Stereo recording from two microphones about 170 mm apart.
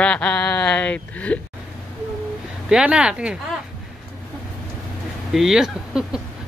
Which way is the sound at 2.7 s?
5° right (ahead or behind).